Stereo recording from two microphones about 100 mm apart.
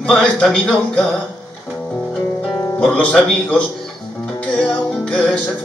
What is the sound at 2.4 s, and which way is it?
Music, 15° left (ahead or behind).